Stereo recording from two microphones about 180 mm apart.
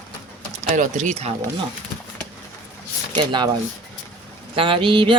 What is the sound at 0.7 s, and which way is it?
Speech, 45° right (ahead or behind).